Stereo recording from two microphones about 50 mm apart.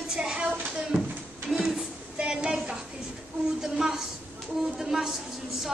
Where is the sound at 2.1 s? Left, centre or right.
Centre.